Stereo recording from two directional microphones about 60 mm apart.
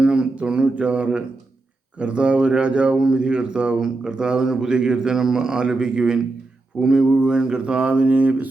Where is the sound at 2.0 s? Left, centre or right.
Centre.